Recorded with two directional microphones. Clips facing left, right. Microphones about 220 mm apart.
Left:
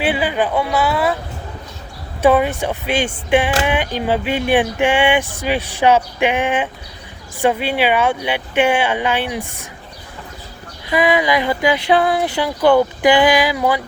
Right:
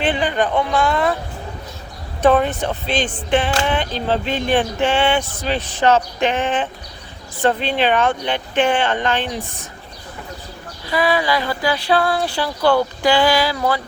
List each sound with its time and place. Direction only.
0.0 s speech: 10° left (ahead or behind)
2.2 s speech: 10° left (ahead or behind)
10.8 s speech: 20° left (ahead or behind)